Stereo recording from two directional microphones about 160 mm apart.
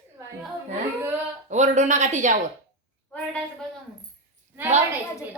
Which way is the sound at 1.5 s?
45° right (ahead or behind).